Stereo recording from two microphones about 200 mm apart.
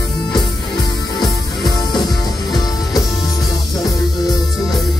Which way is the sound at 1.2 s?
20° left (ahead or behind).